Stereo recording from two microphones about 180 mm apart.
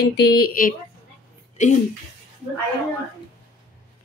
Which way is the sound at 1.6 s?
40° left (ahead or behind).